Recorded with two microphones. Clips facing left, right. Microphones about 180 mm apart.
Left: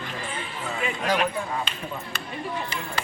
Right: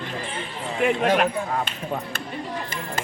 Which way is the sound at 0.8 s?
55° right (ahead or behind).